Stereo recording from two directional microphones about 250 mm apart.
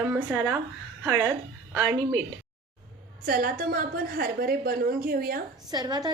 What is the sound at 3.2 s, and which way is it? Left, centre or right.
A woman's voice, right.